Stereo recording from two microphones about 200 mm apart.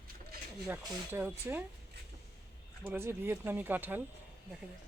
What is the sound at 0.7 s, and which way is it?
Speech, 10° right (ahead or behind).